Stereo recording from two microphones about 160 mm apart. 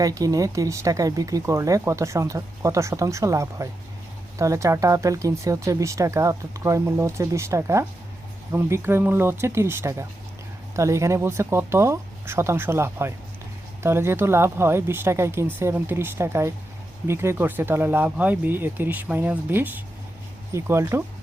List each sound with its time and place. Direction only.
0.0 s speech: 20° right (ahead or behind)